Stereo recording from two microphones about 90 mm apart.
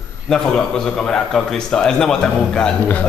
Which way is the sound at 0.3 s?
10° left (ahead or behind).